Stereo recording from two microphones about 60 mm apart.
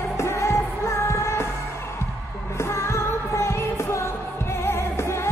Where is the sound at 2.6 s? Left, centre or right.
Left.